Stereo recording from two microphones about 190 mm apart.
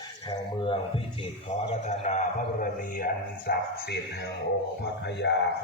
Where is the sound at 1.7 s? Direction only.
40° left (ahead or behind).